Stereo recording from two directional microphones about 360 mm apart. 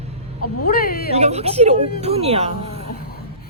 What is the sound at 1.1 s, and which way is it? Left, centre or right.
Speech, centre.